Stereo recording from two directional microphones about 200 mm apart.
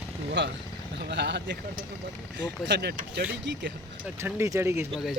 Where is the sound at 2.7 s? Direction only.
55° right (ahead or behind).